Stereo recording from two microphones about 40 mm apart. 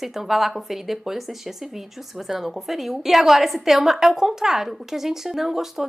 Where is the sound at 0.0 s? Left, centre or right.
Centre.